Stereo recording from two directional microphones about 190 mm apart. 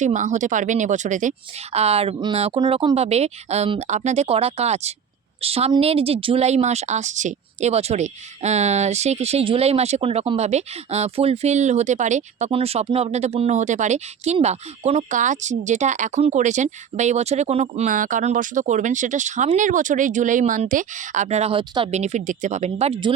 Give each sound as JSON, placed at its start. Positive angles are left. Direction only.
{"t": 0.0, "sound": "a woman's voice", "side_deg": -40}